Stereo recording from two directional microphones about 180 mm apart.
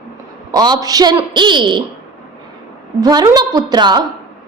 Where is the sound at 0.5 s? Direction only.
20° right (ahead or behind).